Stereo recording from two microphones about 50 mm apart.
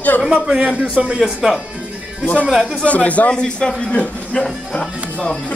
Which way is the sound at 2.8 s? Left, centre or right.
Left.